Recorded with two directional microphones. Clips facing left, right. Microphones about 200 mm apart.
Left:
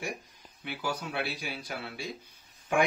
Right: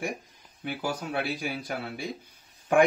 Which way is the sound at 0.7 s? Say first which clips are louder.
Right 3 dB; 45° right (ahead or behind).